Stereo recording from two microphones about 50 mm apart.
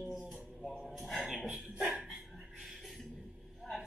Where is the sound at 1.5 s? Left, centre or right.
Right.